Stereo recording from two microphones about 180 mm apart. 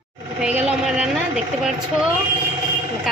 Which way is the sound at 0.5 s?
5° right (ahead or behind).